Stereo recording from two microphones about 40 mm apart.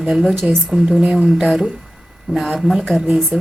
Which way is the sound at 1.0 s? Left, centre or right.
Centre.